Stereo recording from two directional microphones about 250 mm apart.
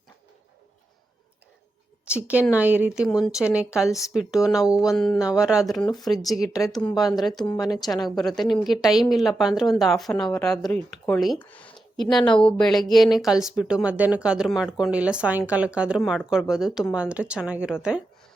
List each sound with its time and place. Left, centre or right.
2.0 s speech: centre
5.9 s speech: centre
6.2 s speech: centre